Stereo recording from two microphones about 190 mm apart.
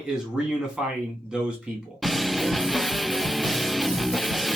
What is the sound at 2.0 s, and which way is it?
Music, centre (ahead or behind).